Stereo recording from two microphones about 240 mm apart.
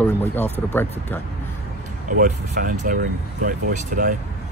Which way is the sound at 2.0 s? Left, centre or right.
Right.